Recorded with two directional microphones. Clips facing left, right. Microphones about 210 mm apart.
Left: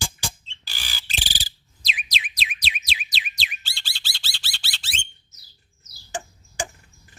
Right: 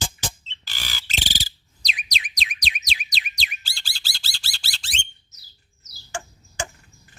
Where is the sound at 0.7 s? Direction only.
15° left (ahead or behind).